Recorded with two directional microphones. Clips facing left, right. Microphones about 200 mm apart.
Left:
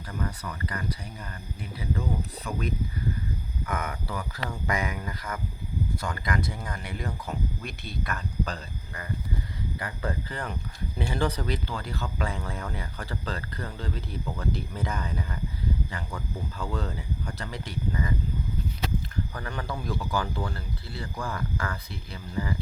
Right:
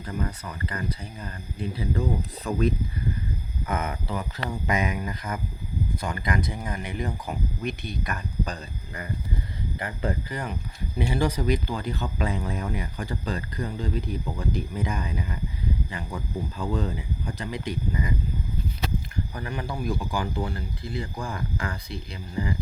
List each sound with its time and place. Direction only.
0.0 s speech: 25° right (ahead or behind)
3.7 s speech: 25° right (ahead or behind)
9.7 s speech: 20° right (ahead or behind)
19.3 s speech: 15° right (ahead or behind)